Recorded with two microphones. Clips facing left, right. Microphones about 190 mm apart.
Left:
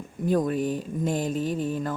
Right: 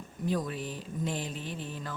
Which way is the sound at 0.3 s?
50° left (ahead or behind).